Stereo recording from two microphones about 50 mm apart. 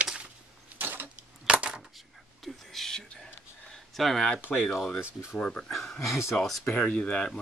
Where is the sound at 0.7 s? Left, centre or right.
Right.